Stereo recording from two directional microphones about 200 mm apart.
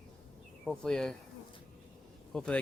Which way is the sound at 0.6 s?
5° left (ahead or behind).